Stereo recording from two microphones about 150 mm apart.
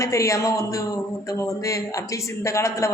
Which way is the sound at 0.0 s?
20° left (ahead or behind).